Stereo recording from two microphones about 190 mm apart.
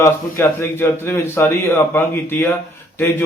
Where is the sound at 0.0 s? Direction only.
15° left (ahead or behind).